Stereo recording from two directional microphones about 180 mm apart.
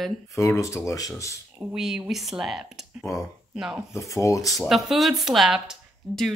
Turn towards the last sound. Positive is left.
turn(degrees=0)  # may be behind; listen again after turning